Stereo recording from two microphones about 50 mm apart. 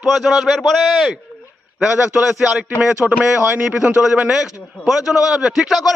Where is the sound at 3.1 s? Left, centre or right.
Centre.